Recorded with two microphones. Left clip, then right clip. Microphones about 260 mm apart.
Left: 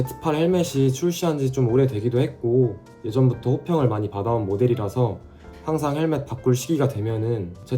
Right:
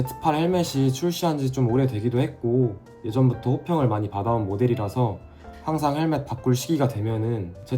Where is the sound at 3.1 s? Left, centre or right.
Right.